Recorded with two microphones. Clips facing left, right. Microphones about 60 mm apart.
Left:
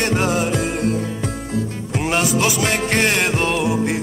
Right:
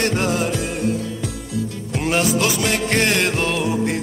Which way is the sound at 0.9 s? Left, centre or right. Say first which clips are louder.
Left 2 dB; left.